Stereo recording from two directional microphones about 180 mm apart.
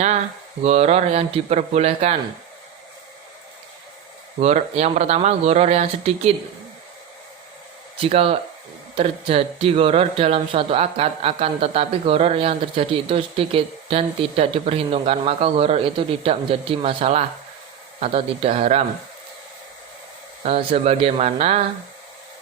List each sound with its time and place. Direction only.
0.6 s speech: 35° right (ahead or behind)
4.4 s speech: 35° right (ahead or behind)
7.9 s speech: 30° right (ahead or behind)
20.4 s speech: 30° right (ahead or behind)